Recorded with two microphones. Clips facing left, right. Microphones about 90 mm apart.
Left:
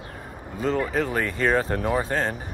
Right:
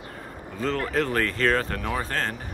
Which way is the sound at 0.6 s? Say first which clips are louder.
Left 2 dB; 10° left (ahead or behind).